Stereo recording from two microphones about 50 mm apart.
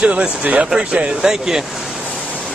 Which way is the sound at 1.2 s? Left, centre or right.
Centre.